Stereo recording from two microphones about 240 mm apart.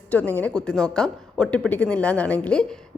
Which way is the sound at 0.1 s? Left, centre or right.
Centre.